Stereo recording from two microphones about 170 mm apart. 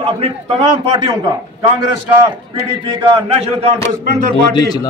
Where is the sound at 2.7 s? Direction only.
30° right (ahead or behind).